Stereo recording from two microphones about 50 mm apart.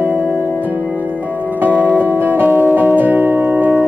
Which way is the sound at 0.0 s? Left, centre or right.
Right.